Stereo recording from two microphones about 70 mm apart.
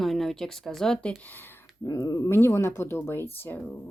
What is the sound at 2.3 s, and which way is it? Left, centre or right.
Speech, left.